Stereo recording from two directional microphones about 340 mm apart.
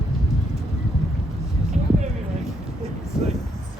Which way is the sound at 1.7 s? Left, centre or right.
Centre.